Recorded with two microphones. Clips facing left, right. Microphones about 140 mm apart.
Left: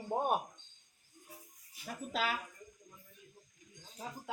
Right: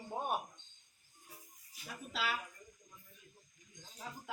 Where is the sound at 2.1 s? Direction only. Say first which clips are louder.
Left 3 dB; 45° left (ahead or behind).